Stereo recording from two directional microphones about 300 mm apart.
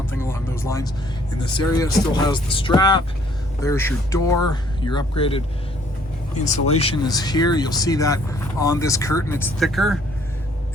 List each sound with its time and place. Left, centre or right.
0.1 s music: centre
1.5 s speech: centre
6.4 s speech: left; by 10.0 s centre